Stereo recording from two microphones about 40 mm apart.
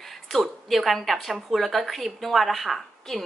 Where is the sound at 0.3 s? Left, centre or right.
Centre.